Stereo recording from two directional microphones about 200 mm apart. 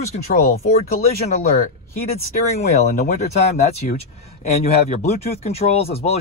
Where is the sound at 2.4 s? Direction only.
35° left (ahead or behind).